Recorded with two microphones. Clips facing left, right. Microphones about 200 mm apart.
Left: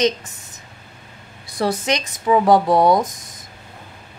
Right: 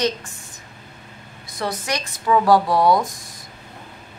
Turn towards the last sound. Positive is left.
turn(degrees=20)  # may be behind; listen again after turning